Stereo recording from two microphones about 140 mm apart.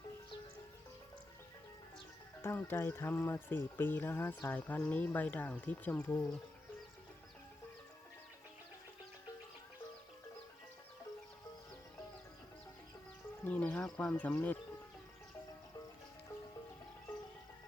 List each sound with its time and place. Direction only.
2.4 s speech: 15° left (ahead or behind)
13.4 s speech: 10° left (ahead or behind)